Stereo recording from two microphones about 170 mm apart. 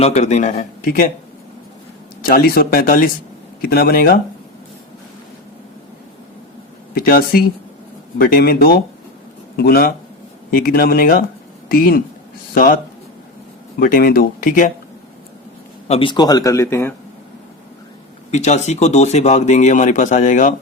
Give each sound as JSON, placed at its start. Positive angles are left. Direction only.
{"t": 0.0, "sound": "speech", "side_deg": 40}
{"t": 0.5, "sound": "speech", "side_deg": 55}
{"t": 2.2, "sound": "speech", "side_deg": 60}
{"t": 6.9, "sound": "speech", "side_deg": 60}
{"t": 15.9, "sound": "speech", "side_deg": 30}
{"t": 18.3, "sound": "speech", "side_deg": 40}